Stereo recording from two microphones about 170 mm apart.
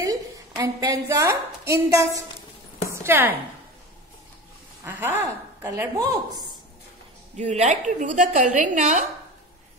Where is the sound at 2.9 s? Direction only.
15° right (ahead or behind).